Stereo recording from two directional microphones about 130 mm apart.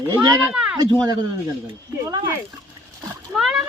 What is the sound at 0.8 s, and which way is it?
Speech, 30° right (ahead or behind).